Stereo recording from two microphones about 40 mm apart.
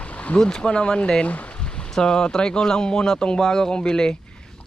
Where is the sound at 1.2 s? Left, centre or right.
Left.